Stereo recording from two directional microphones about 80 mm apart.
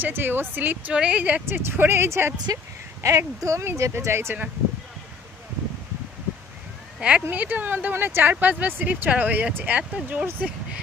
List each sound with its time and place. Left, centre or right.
0.0 s speech: right
1.7 s speech: right
2.3 s speech: right
3.0 s speech: right
7.0 s speech: centre